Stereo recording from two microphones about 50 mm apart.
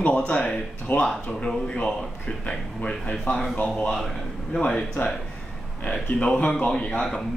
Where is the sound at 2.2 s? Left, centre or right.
Left.